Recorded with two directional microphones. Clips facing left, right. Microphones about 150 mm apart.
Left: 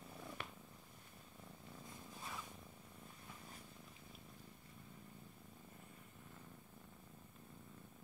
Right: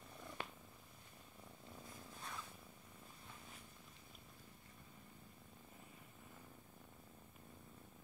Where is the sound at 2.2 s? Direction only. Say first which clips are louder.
Left 1 dB; 5° left (ahead or behind).